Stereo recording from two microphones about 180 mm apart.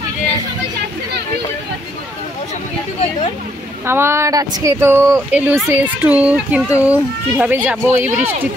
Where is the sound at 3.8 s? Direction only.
15° right (ahead or behind).